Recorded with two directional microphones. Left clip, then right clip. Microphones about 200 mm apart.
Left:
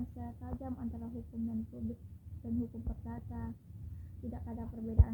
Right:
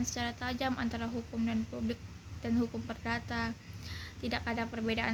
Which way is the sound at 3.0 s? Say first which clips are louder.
Right 15 dB; 30° right (ahead or behind).